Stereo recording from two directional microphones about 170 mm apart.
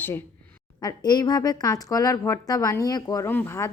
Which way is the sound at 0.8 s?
25° left (ahead or behind).